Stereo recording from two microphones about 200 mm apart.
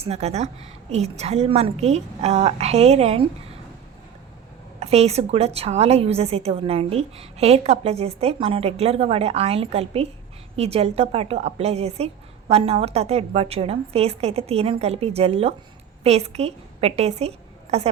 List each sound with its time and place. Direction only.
0.0 s a woman's voice: 30° right (ahead or behind)
4.8 s a woman's voice: 30° right (ahead or behind)